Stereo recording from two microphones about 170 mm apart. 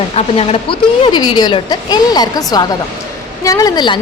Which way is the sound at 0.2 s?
35° left (ahead or behind).